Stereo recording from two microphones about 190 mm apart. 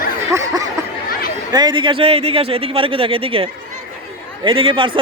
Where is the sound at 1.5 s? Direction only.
20° right (ahead or behind).